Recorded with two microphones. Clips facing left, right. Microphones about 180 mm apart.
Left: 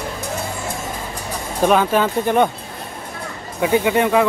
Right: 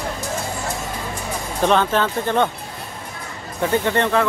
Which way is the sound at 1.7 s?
10° left (ahead or behind).